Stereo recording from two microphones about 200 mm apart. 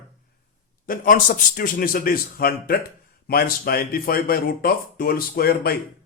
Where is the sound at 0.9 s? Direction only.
45° left (ahead or behind).